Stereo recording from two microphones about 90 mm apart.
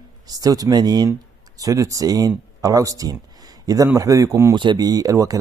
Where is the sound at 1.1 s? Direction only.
35° right (ahead or behind).